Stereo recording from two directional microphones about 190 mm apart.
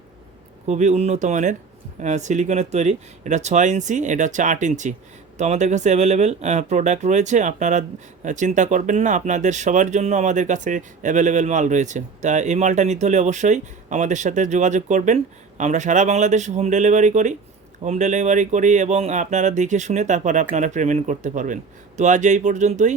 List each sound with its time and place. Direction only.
0.7 s speech: 40° right (ahead or behind)